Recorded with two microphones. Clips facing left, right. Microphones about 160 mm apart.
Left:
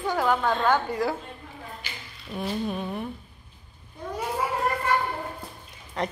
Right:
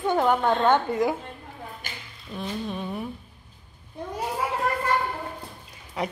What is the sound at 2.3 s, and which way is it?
Speech, 10° left (ahead or behind).